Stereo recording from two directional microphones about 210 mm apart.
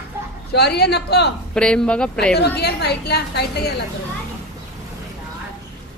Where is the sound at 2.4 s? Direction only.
50° left (ahead or behind).